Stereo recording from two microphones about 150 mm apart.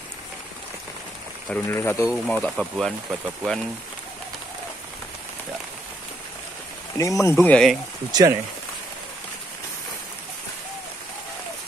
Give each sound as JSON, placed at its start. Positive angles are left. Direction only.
{"t": 1.5, "sound": "speech", "side_deg": 15}
{"t": 2.2, "sound": "speech", "side_deg": 5}
{"t": 7.0, "sound": "speech", "side_deg": 20}
{"t": 7.3, "sound": "speech", "side_deg": 5}
{"t": 8.1, "sound": "speech", "side_deg": -25}